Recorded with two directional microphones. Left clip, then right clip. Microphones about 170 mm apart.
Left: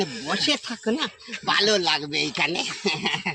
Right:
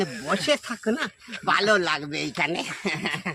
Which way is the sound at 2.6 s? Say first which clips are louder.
Left 3 dB; 50° right (ahead or behind).